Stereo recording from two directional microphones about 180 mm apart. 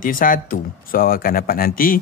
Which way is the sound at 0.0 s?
50° left (ahead or behind).